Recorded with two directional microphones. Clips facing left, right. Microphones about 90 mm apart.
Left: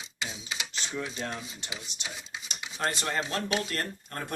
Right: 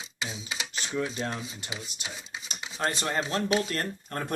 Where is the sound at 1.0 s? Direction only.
25° right (ahead or behind).